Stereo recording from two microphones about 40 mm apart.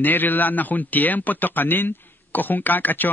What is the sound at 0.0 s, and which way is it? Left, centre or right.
A man's voice, left.